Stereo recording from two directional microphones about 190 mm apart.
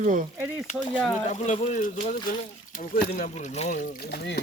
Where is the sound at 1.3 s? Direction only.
35° left (ahead or behind).